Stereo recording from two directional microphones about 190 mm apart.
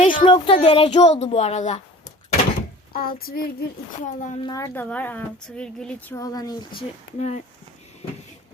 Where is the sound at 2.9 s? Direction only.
50° left (ahead or behind).